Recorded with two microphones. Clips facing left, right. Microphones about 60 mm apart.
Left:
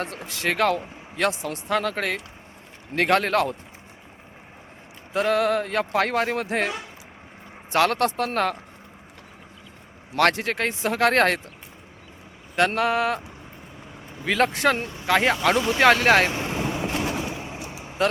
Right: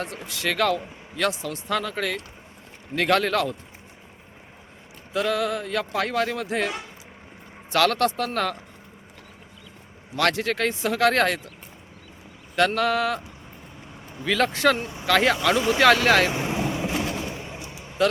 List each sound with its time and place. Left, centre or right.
0.3 s a man's voice: left
1.8 s a man's voice: left
5.1 s a man's voice: left
10.2 s a man's voice: left
12.5 s a sound: left
14.3 s a man's voice: left
15.0 s a sound: left
15.8 s a man's voice: left
16.3 s vehicle: centre
17.2 s a sound: centre
17.7 s vehicle: left